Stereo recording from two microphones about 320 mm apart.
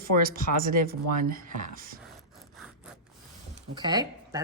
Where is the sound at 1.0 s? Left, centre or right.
Right.